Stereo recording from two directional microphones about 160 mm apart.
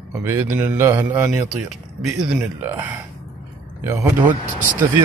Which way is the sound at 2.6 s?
15° right (ahead or behind).